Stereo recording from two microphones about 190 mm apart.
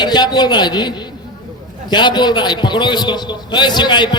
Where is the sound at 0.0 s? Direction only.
20° left (ahead or behind).